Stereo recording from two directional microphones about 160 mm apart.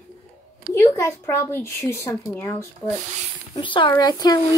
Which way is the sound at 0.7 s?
15° left (ahead or behind).